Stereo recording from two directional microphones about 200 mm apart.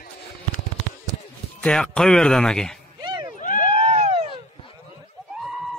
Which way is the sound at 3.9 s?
30° right (ahead or behind).